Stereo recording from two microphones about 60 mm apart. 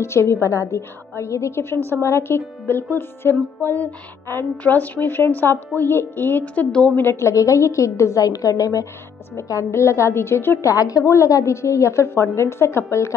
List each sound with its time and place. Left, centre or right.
0.0 s a woman's voice: left
2.6 s music: left
6.4 s a woman's voice: left
7.2 s a woman's voice: left
9.3 s a woman's voice: left
10.6 s a woman's voice: left